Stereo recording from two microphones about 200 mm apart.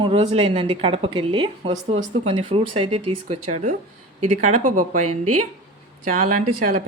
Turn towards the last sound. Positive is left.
turn(degrees=-40)  # may be behind; listen again after turning